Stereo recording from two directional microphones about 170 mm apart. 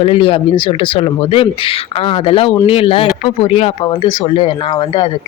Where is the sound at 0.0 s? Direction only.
35° left (ahead or behind).